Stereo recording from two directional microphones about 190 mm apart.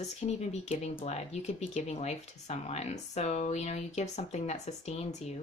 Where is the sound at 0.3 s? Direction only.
35° left (ahead or behind).